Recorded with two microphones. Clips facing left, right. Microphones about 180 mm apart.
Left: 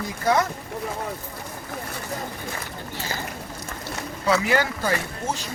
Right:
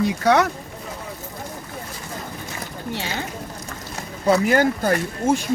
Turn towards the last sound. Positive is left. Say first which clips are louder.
# right 7 dB
turn(degrees=-55)  # may be behind; listen again after turning